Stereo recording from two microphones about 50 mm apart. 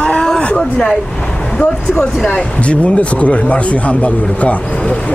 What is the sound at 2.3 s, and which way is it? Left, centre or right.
Speech, left.